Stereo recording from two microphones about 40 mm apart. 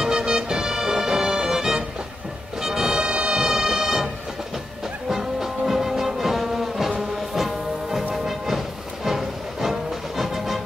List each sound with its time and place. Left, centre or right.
0.0 s music: centre
5.1 s music: centre